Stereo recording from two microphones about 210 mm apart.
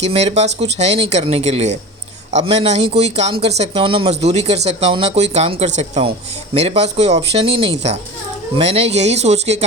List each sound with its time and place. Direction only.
0.0 s speech: 30° right (ahead or behind)